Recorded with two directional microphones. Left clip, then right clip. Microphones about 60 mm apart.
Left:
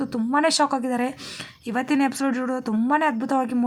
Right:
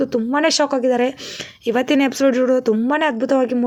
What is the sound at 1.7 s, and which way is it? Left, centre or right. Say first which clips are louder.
Speech: right 6 dB; right.